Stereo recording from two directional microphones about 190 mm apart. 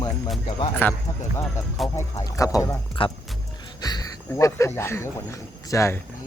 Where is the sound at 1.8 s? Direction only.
20° left (ahead or behind).